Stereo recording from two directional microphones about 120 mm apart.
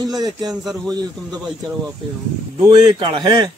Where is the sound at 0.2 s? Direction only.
35° right (ahead or behind).